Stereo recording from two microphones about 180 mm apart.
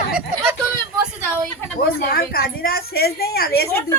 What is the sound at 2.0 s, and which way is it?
A woman's voice, 55° left (ahead or behind).